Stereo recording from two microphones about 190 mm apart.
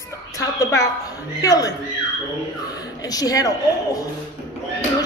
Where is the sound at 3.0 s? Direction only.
20° left (ahead or behind).